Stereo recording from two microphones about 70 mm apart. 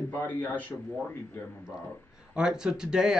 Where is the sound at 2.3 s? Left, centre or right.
Centre.